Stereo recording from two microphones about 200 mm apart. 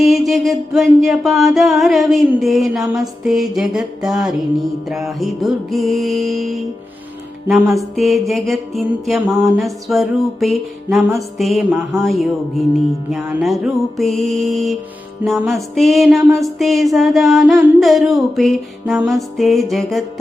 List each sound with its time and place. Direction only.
0.0 s music: centre (ahead or behind)